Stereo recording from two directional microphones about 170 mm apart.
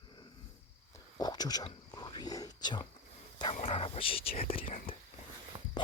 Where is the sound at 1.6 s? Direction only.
25° left (ahead or behind).